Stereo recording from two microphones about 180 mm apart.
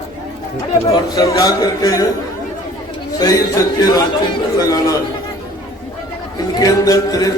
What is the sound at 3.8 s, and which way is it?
Speech, 20° left (ahead or behind).